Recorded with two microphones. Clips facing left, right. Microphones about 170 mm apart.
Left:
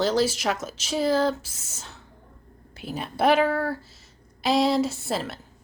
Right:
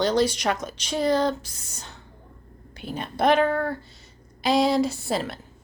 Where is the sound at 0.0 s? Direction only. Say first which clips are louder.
Right 1 dB; centre (ahead or behind).